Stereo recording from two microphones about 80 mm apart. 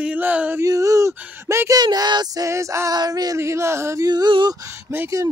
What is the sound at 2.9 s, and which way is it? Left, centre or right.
Speech, right.